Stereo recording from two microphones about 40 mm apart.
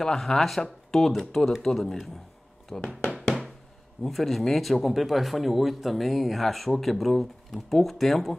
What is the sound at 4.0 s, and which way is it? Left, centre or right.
Speech, centre.